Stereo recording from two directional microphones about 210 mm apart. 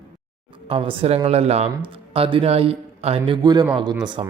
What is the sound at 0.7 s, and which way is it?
Speech, 25° right (ahead or behind).